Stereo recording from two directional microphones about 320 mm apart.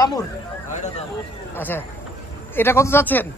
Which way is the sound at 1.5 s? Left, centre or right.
Centre.